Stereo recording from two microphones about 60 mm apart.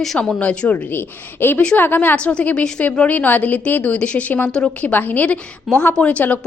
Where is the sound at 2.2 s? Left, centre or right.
Left.